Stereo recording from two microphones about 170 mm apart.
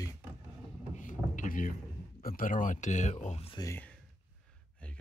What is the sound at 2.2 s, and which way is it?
Speech, 55° left (ahead or behind).